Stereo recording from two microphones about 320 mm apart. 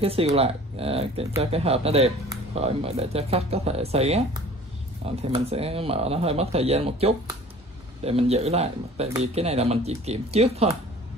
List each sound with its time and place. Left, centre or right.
0.0 s speech: centre